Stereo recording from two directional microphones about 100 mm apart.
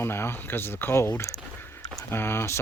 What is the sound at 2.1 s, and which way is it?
Speech, 25° left (ahead or behind).